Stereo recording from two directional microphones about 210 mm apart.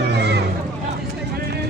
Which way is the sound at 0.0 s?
55° right (ahead or behind).